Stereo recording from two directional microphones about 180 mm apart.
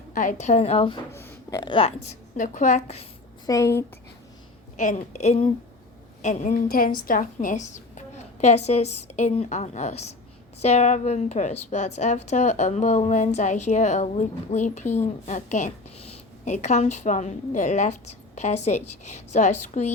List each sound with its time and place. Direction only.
0.1 s a woman's voice: 45° left (ahead or behind)
1.1 s speech: 15° left (ahead or behind); by 2.1 s 30° left (ahead or behind)
2.3 s a woman's voice: 45° left (ahead or behind)
3.4 s a woman's voice: 20° left (ahead or behind)
4.8 s a woman's voice: 40° left (ahead or behind)